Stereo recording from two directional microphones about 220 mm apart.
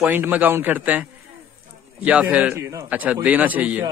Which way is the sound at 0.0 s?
10° right (ahead or behind).